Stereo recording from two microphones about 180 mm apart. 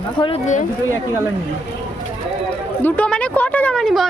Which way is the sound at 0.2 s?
35° left (ahead or behind).